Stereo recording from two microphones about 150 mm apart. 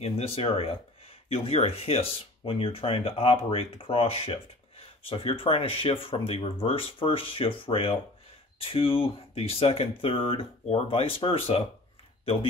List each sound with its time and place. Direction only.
0.0 s speech: 40° left (ahead or behind)